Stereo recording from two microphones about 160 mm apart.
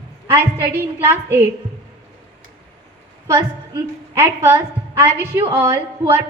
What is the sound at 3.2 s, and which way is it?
A woman's voice, 15° right (ahead or behind).